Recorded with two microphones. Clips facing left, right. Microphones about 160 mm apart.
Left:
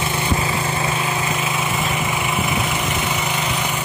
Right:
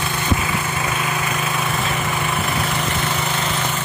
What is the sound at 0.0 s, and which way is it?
Lawn mower, 25° left (ahead or behind).